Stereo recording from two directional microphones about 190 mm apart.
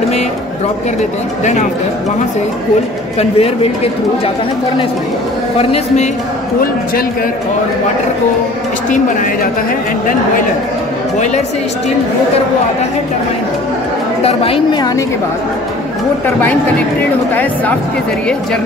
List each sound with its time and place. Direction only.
3.2 s a man's voice: 30° left (ahead or behind)
5.6 s a man's voice: 30° left (ahead or behind)
8.9 s a man's voice: 45° left (ahead or behind)
14.2 s a woman's voice: 30° left (ahead or behind)
17.3 s speech: 10° left (ahead or behind)